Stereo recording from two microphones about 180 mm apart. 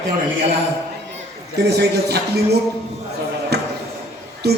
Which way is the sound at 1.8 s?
65° right (ahead or behind).